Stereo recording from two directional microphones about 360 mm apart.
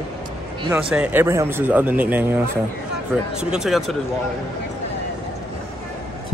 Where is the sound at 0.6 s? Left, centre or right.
Centre.